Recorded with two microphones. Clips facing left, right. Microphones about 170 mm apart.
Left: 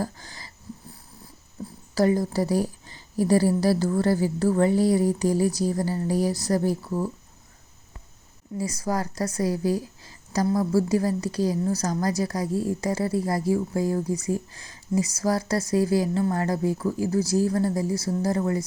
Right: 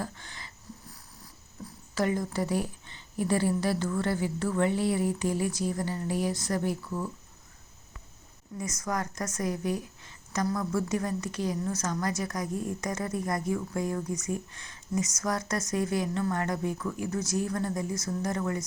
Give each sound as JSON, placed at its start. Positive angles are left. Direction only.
{"t": 0.0, "sound": "a sound", "side_deg": 35}
{"t": 2.0, "sound": "speech", "side_deg": 35}
{"t": 8.5, "sound": "speech", "side_deg": 30}
{"t": 12.5, "sound": "speech", "side_deg": 90}
{"t": 12.8, "sound": "speech", "side_deg": 30}